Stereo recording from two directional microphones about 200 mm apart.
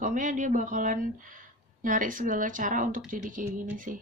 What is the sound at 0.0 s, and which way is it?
A woman's voice, 40° right (ahead or behind).